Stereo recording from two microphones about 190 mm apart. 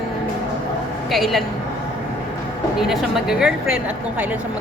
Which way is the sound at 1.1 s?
Centre (ahead or behind).